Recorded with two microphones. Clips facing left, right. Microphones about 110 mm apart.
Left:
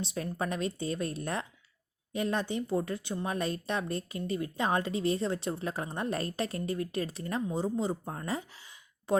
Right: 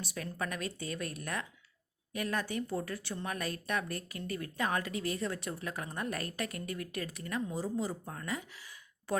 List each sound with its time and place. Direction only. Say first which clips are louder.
0.0 s a woman's voice: left 5 dB; 25° left (ahead or behind)